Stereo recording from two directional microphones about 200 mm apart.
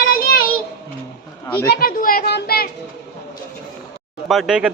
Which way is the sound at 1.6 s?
45° left (ahead or behind).